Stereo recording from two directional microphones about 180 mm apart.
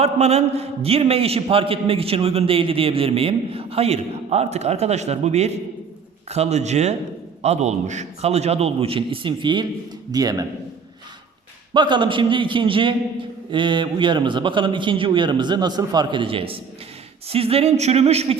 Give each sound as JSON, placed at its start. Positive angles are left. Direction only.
{"t": 0.0, "sound": "a man's voice", "side_deg": -35}
{"t": 11.7, "sound": "a man's voice", "side_deg": -25}